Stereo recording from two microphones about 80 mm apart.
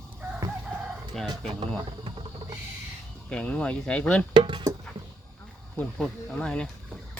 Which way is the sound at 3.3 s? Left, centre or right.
Centre.